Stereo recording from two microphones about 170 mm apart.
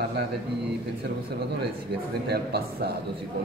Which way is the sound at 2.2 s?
70° right (ahead or behind).